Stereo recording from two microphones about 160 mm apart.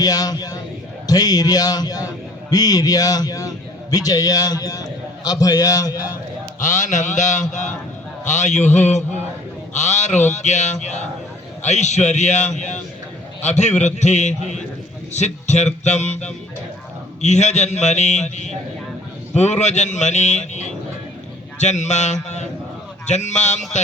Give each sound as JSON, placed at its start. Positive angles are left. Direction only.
{"t": 0.0, "sound": "a man's voice", "side_deg": 25}
{"t": 6.6, "sound": "a man's voice", "side_deg": 50}